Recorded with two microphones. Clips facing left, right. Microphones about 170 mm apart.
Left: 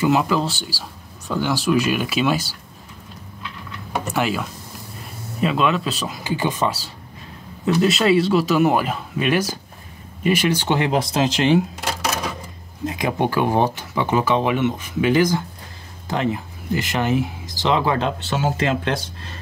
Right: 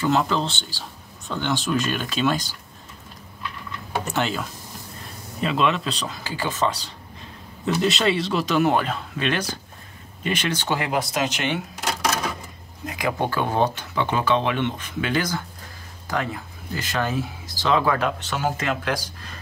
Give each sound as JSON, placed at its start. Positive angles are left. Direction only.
{"t": 0.0, "sound": "speech", "side_deg": 5}
{"t": 4.1, "sound": "speech", "side_deg": 5}
{"t": 6.2, "sound": "speech", "side_deg": 15}
{"t": 10.7, "sound": "speech", "side_deg": 25}
{"t": 12.8, "sound": "speech", "side_deg": 20}